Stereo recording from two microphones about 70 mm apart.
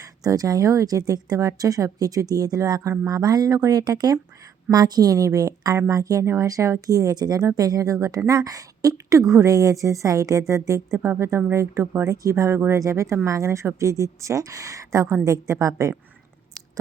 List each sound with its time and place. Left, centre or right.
0.0 s a woman's voice: right